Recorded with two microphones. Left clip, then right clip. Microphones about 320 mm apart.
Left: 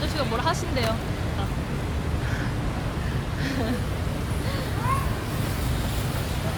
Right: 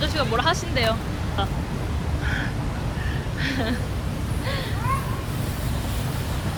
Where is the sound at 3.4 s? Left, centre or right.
Centre.